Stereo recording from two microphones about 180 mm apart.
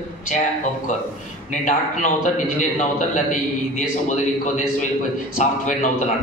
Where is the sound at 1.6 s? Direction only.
45° left (ahead or behind).